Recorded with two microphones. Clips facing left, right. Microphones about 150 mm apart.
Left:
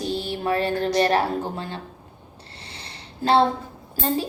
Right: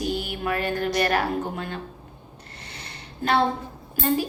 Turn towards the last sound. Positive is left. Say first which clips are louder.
# right 1 dB
turn(degrees=30)  # may be behind; listen again after turning